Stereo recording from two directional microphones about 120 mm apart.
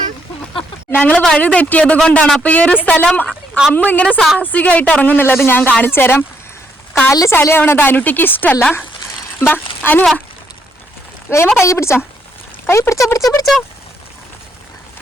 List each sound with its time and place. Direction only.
0.9 s a woman's voice: 10° left (ahead or behind)
9.8 s a woman's voice: 15° left (ahead or behind)
11.3 s speech: 20° left (ahead or behind)